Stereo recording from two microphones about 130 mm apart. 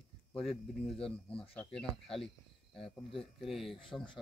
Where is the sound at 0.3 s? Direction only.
Centre (ahead or behind).